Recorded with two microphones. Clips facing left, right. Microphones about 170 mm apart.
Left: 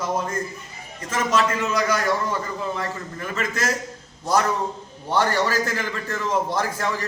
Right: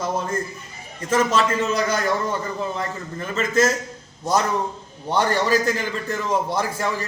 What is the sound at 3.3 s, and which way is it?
Speech, 25° right (ahead or behind).